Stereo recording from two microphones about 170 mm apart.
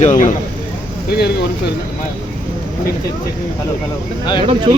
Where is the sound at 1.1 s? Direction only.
70° left (ahead or behind).